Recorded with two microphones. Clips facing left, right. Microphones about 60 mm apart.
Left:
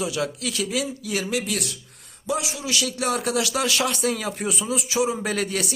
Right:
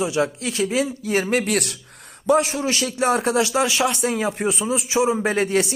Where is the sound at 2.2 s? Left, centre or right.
Right.